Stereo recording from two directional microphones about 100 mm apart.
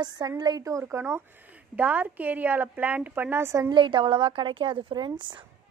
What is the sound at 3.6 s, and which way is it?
A woman's voice, 55° right (ahead or behind).